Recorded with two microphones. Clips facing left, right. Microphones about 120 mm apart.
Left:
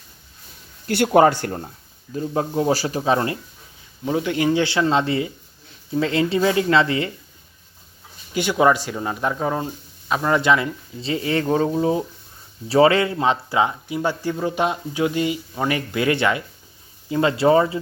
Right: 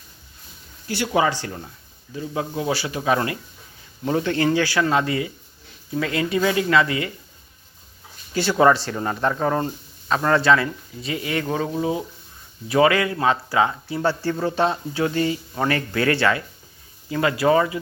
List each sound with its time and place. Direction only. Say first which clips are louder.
0.9 s speech: left 6 dB; 55° left (ahead or behind); by 3.3 s 30° left (ahead or behind)
4.0 s speech: even; 10° left (ahead or behind); by 7.1 s 30° left (ahead or behind)
8.3 s speech: right 1 dB; 15° left (ahead or behind)
11.0 s speech: left 4 dB; 30° left (ahead or behind)